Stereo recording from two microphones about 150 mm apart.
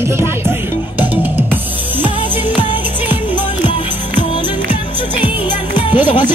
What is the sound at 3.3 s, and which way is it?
Music, 35° left (ahead or behind).